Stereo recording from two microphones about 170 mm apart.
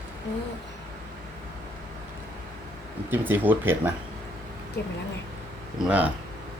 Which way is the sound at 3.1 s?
10° right (ahead or behind).